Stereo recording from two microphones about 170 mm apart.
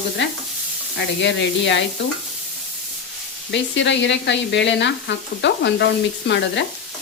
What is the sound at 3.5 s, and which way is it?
Speech, 90° left.